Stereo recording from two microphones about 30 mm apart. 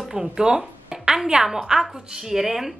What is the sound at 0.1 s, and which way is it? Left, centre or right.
A woman's voice, right.